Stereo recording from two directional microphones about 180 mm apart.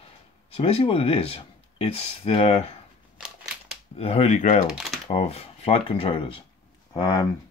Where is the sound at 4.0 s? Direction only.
35° left (ahead or behind).